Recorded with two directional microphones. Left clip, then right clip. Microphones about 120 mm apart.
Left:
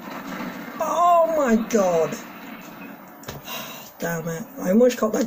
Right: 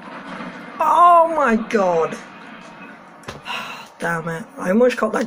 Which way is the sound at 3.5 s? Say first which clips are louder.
Right 8 dB; 40° left (ahead or behind).